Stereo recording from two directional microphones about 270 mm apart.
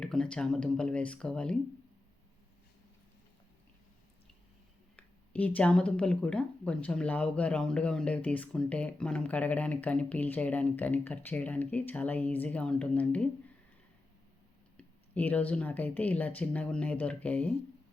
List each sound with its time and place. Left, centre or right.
0.0 s speech: centre
4.9 s speech: centre
14.8 s speech: centre